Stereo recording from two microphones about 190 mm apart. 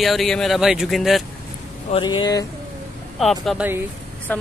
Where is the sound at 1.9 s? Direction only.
25° left (ahead or behind).